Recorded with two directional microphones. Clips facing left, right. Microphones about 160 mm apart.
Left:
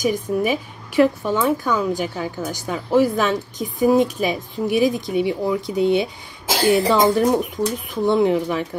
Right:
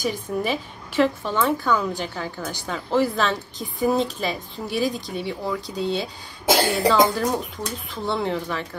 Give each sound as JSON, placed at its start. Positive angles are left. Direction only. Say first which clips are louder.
{"t": 0.4, "sound": "a woman's voice", "louder": "left 4 dB", "side_deg": 10}